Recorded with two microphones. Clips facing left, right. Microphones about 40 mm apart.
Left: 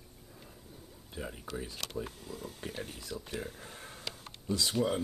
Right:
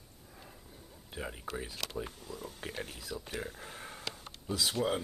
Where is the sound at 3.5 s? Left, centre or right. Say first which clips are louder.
Right 2 dB; centre.